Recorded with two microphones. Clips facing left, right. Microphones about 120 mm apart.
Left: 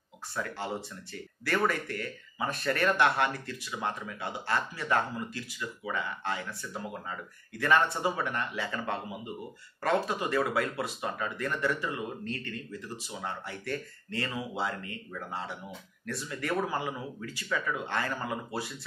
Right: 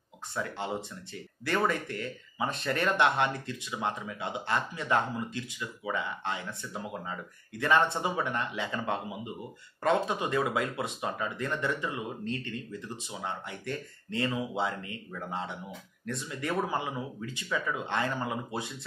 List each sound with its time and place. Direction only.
0.3 s speech: 20° right (ahead or behind)